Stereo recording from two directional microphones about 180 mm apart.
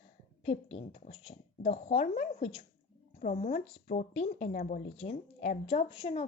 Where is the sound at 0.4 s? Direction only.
35° left (ahead or behind).